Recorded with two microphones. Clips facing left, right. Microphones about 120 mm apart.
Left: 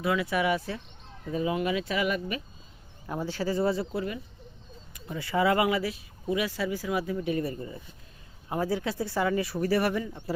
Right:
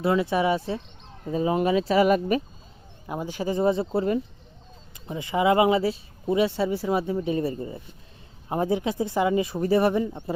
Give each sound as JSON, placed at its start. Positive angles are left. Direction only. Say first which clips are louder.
{"t": 0.0, "sound": "speech", "louder": "right 4 dB", "side_deg": -30}
{"t": 3.1, "sound": "speech", "louder": "right 2 dB", "side_deg": -15}
{"t": 3.9, "sound": "speech", "louder": "right 8 dB", "side_deg": -40}
{"t": 4.9, "sound": "speech", "louder": "right 2 dB", "side_deg": -20}